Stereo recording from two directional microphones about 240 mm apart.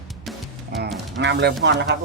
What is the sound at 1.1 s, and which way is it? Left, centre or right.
Speech, right.